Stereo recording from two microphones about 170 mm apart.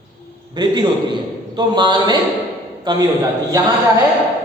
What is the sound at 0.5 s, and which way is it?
A woman's voice, 25° right (ahead or behind).